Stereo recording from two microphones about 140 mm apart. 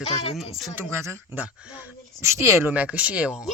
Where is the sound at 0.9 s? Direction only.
20° right (ahead or behind).